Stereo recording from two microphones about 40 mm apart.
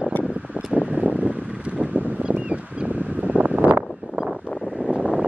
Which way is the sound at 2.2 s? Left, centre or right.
Right.